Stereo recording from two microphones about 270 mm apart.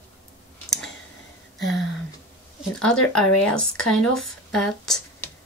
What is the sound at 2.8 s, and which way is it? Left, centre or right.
Speech, centre.